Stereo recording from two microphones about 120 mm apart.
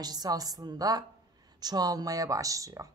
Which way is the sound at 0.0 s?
35° right (ahead or behind).